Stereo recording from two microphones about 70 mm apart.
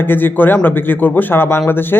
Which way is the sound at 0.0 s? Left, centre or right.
Left.